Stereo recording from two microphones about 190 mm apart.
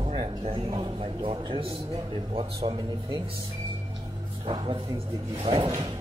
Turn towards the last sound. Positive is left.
turn(degrees=-30)  # may be behind; listen again after turning